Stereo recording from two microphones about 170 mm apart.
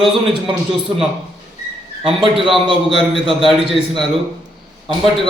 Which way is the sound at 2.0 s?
30° right (ahead or behind).